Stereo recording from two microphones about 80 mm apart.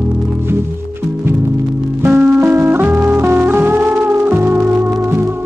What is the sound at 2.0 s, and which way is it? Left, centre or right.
Music, right.